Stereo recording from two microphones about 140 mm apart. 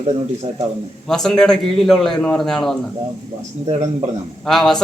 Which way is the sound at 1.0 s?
5° left (ahead or behind).